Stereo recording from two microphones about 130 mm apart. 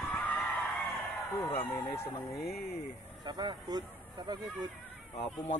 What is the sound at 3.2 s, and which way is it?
Vehicle, 35° right (ahead or behind).